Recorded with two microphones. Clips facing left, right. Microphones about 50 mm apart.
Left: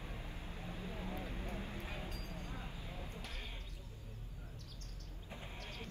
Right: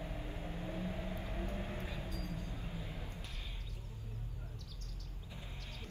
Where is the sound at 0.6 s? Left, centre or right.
Right.